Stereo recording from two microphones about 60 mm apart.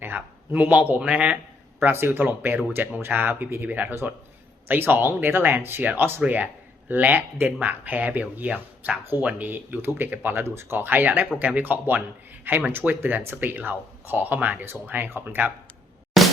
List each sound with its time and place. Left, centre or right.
0.0 s speech: right
1.8 s speech: right
6.2 s speech: right
10.4 s speech: right
16.1 s music: centre